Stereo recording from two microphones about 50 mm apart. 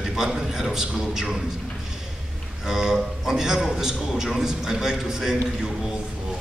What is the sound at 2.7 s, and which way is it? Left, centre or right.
A man's voice, centre.